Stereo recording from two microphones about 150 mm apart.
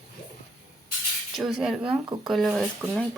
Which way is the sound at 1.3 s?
5° right (ahead or behind).